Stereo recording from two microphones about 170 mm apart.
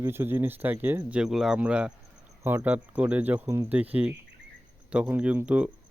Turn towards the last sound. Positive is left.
turn(degrees=-5)  # may be behind; listen again after turning